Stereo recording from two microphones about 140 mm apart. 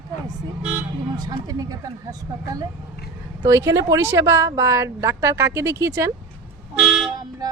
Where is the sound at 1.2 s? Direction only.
25° right (ahead or behind).